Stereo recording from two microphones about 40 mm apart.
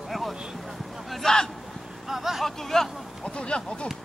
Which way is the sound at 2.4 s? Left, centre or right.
Centre.